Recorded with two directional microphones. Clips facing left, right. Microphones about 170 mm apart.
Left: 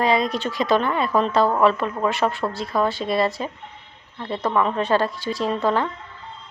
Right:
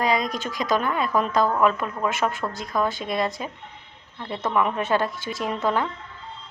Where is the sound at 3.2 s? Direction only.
Centre (ahead or behind).